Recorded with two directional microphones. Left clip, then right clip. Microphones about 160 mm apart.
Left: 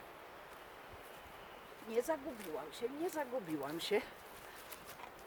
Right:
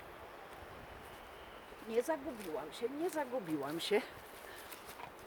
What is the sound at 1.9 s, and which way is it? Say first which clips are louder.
Speech: right 1 dB; 5° right (ahead or behind).